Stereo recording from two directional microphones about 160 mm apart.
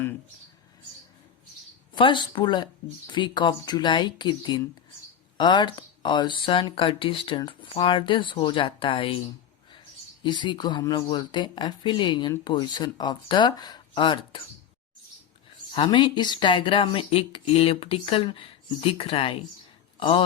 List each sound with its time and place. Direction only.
2.0 s speech: 30° left (ahead or behind)
10.2 s speech: 30° left (ahead or behind)
15.7 s speech: 30° left (ahead or behind)